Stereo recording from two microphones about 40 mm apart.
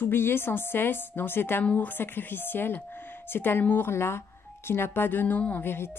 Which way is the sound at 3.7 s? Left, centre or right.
Left.